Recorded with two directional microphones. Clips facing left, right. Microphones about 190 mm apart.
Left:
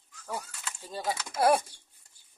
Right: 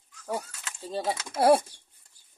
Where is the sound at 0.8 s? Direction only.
25° right (ahead or behind).